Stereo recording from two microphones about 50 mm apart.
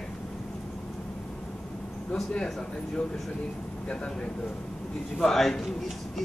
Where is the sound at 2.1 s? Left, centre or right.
Centre.